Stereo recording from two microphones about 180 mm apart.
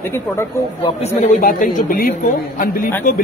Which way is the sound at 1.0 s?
40° left (ahead or behind).